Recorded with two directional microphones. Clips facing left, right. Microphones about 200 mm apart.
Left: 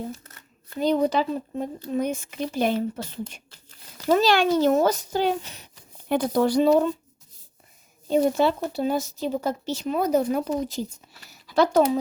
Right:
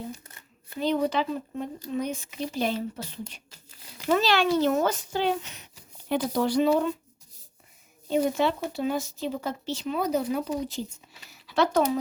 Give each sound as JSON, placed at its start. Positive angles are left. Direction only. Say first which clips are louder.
{"t": 0.8, "sound": "speech", "louder": "left 4 dB", "side_deg": 35}
{"t": 6.1, "sound": "speech", "louder": "left 4 dB", "side_deg": 50}
{"t": 8.0, "sound": "speech", "louder": "left 4 dB", "side_deg": 35}
{"t": 11.3, "sound": "a sound", "louder": "left 4 dB", "side_deg": 40}